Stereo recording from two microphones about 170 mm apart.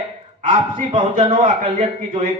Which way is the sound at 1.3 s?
45° right (ahead or behind).